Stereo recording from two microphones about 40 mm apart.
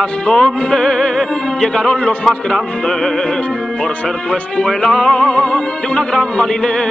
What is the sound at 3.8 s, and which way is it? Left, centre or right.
Speech, left.